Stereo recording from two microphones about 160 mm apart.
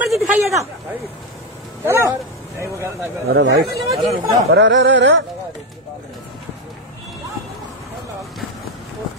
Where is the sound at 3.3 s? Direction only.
90° right.